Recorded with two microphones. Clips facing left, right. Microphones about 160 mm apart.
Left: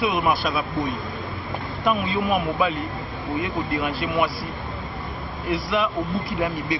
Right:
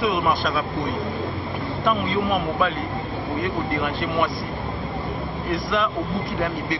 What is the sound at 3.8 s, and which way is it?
Speech, 5° left (ahead or behind).